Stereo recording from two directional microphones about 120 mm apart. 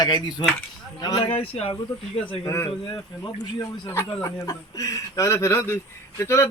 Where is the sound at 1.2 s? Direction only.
55° left (ahead or behind).